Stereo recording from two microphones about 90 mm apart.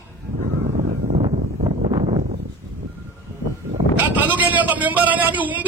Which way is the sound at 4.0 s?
20° right (ahead or behind).